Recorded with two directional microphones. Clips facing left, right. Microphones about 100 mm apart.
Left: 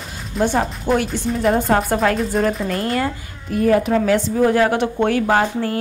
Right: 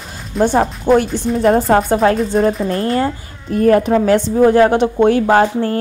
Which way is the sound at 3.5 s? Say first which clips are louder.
Right 4 dB; 45° right (ahead or behind).